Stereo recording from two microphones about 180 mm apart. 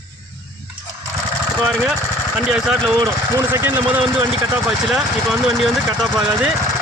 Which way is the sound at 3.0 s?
20° right (ahead or behind).